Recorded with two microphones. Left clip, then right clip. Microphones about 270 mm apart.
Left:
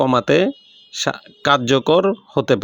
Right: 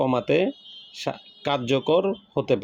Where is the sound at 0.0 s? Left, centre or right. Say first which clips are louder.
Left 6 dB; left.